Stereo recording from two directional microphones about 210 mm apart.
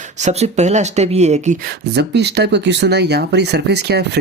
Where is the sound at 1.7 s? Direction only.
50° right (ahead or behind).